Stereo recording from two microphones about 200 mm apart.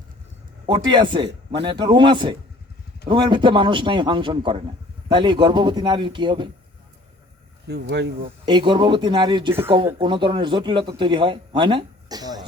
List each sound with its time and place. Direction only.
0.7 s a man's voice: 20° right (ahead or behind)
7.7 s speech: 60° right (ahead or behind)
8.4 s a man's voice: 25° right (ahead or behind)